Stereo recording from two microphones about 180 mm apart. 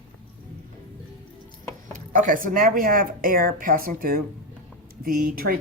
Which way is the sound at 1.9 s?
45° right (ahead or behind).